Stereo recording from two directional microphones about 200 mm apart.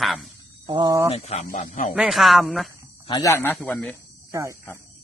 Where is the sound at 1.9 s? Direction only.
Centre (ahead or behind).